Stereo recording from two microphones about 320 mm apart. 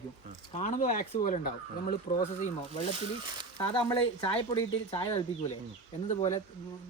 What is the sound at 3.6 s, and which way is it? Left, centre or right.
Speech, centre.